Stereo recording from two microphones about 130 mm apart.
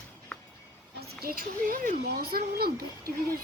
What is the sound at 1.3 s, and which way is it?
Speech, 90° right.